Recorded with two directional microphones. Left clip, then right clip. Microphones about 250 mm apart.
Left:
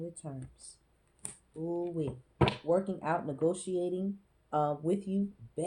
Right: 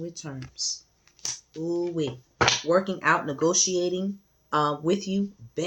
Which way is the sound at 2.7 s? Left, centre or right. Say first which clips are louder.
Right 8 dB; right.